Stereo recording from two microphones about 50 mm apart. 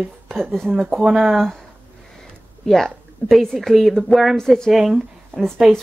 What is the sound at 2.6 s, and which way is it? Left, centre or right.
A woman's voice, centre.